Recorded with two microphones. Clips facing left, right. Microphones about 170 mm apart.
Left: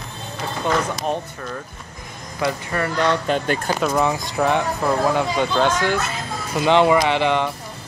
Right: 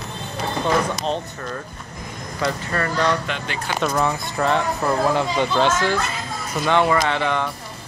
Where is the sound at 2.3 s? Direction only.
15° left (ahead or behind).